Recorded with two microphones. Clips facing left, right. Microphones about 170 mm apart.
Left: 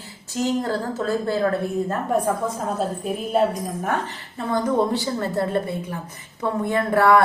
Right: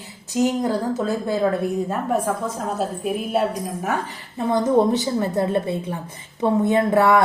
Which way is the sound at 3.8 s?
5° right (ahead or behind).